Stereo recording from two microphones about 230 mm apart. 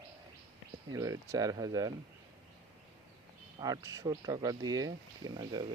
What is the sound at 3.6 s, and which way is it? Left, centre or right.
Speech, centre.